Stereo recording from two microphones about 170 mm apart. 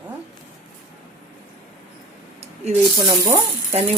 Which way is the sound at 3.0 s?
15° right (ahead or behind).